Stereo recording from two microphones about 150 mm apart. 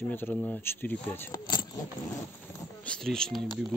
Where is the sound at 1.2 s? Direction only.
25° left (ahead or behind).